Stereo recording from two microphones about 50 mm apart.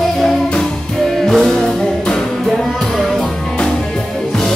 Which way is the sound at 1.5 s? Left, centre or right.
Centre.